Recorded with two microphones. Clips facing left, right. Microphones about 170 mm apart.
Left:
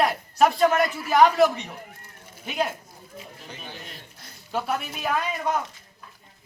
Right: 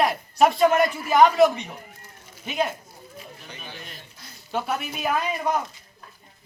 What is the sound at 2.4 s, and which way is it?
Speech, 5° left (ahead or behind).